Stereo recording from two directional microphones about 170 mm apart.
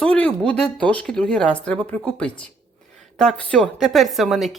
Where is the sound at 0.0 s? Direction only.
5° left (ahead or behind).